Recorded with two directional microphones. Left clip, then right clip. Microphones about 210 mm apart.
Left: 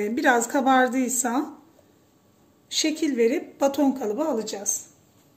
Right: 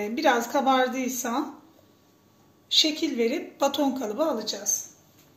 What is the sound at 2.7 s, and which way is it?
A woman's voice, 50° left (ahead or behind).